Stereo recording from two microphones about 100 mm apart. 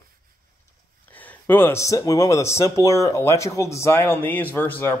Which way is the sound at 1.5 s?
25° left (ahead or behind).